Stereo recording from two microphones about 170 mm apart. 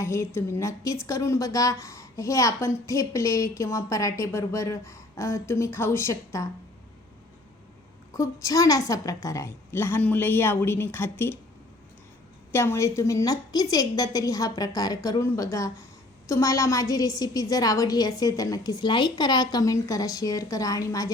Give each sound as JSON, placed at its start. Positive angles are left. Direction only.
{"t": 0.0, "sound": "a woman's voice", "side_deg": 15}
{"t": 8.1, "sound": "a woman's voice", "side_deg": 20}
{"t": 12.5, "sound": "a woman's voice", "side_deg": 15}